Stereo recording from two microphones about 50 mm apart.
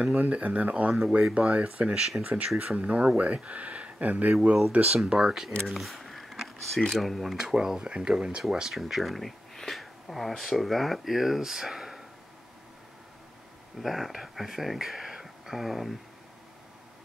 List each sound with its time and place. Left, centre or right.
0.2 s speech: right
4.3 s speech: centre
5.7 s camera: centre
7.0 s speech: centre
7.3 s speech: centre
13.7 s speech: centre